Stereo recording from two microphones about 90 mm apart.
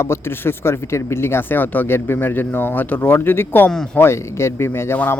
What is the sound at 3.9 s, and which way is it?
Speech, 25° left (ahead or behind).